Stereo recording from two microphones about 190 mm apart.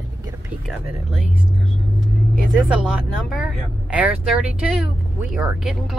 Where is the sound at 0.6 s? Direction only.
5° right (ahead or behind).